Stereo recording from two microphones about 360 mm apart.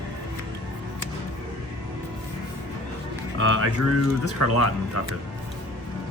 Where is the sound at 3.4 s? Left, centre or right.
Right.